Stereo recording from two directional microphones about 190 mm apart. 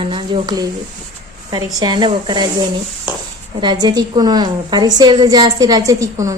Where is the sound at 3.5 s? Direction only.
25° right (ahead or behind).